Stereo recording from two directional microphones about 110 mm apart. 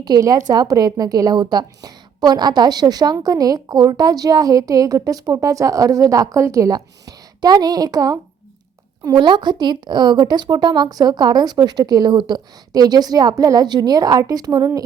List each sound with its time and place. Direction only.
0.0 s a woman's voice: 35° right (ahead or behind)